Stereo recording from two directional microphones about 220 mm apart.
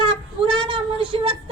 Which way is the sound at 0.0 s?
20° right (ahead or behind).